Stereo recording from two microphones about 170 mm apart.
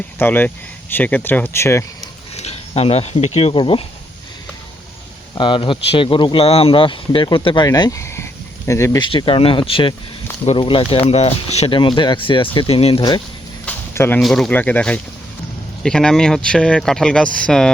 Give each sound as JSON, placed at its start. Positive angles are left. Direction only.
{"t": 0.2, "sound": "speech", "side_deg": 10}
{"t": 2.3, "sound": "speech", "side_deg": 40}
{"t": 5.3, "sound": "speech", "side_deg": 30}
{"t": 9.0, "sound": "speech", "side_deg": 30}
{"t": 13.7, "sound": "a sound", "side_deg": 15}
{"t": 14.2, "sound": "speech", "side_deg": 0}